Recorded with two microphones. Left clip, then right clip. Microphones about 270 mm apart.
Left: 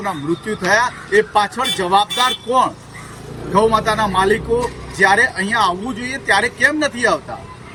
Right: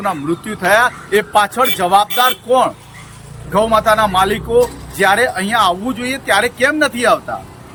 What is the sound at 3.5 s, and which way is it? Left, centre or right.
Speech, centre.